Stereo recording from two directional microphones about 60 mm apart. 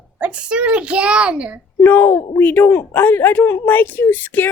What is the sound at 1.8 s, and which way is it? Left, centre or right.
A woman's voice, left.